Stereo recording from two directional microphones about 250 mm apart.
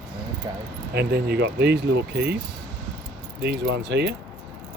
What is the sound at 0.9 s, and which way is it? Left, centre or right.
Speech, right.